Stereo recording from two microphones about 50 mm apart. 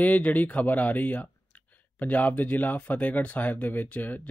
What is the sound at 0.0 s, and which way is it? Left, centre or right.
Speech, left.